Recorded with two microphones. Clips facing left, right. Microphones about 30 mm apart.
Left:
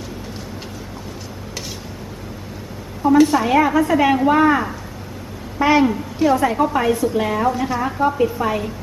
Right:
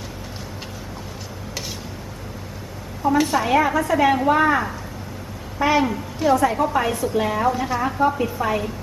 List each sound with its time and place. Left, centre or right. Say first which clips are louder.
3.2 s a woman's voice: left 4 dB; centre